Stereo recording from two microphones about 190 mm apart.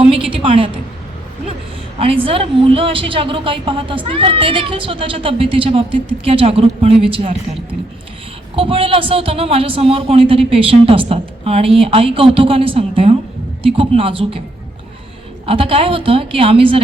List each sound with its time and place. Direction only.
0.0 s a woman's voice: 5° right (ahead or behind)
0.3 s a woman's voice: 30° right (ahead or behind)
2.0 s a woman's voice: 30° right (ahead or behind)
15.4 s a woman's voice: 30° right (ahead or behind)